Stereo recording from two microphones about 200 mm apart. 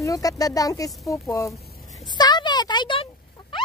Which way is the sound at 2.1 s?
20° left (ahead or behind).